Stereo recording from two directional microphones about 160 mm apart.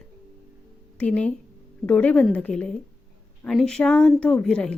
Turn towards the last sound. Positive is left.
turn(degrees=5)  # may be behind; listen again after turning